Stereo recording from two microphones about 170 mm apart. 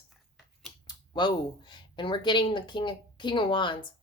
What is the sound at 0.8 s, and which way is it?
A woman's voice, 25° left (ahead or behind).